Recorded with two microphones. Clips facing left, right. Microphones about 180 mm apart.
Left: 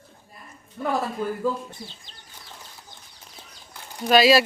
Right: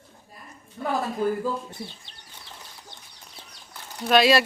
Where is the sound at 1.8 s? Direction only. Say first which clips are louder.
Right 3 dB; 65° right (ahead or behind).